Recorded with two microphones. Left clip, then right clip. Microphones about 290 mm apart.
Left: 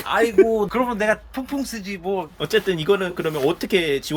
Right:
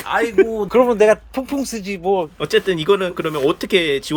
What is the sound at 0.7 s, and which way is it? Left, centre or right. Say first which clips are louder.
Speech: right 8 dB; right.